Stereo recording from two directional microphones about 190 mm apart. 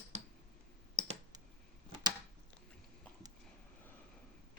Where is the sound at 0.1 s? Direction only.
35° right (ahead or behind).